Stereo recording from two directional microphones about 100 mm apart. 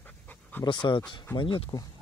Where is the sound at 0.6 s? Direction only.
55° left (ahead or behind).